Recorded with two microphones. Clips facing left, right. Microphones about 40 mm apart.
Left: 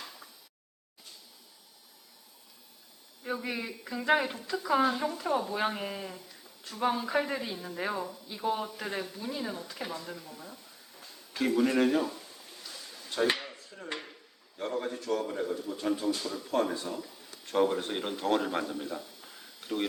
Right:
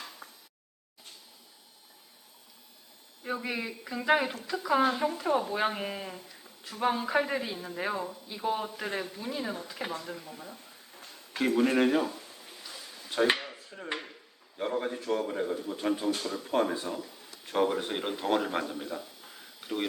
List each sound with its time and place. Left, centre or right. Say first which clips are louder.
0.2 s a sound: right 3 dB; right
3.2 s speech: right 1 dB; centre
11.3 s speech: right 1 dB; right
12.6 s a sound: even; centre
13.7 s dishes: right 3 dB; right
14.6 s speech: right 2 dB; right